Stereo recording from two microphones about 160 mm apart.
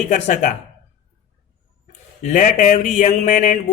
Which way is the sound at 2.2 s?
55° left (ahead or behind).